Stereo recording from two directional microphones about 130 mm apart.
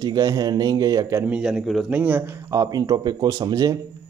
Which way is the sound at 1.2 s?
5° right (ahead or behind).